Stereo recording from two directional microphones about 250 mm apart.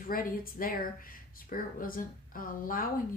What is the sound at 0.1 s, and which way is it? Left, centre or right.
Speech, left.